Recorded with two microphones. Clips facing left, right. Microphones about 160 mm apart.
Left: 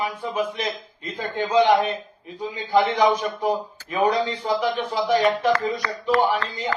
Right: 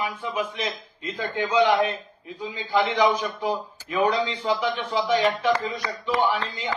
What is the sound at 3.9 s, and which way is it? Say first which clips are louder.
A man's voice: left 2 dB; 45° left (ahead or behind).